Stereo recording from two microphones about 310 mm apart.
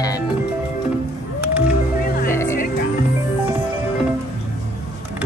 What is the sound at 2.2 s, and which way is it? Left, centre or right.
Music, centre.